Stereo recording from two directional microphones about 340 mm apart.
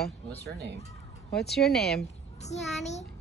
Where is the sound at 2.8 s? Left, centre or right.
Centre.